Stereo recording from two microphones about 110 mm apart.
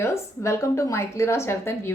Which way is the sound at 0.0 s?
25° left (ahead or behind).